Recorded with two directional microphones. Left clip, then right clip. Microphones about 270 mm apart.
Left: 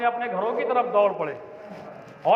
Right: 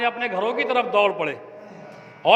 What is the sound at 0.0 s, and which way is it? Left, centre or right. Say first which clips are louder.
A man's voice: right 1 dB; right.